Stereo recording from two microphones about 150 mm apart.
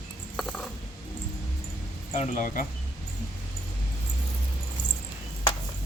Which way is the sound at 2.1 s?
55° left (ahead or behind).